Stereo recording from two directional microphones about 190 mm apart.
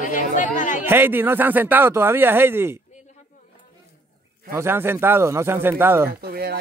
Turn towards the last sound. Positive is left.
turn(degrees=-55)  # may be behind; listen again after turning